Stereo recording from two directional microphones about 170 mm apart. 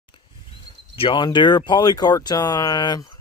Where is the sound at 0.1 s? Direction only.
30° left (ahead or behind).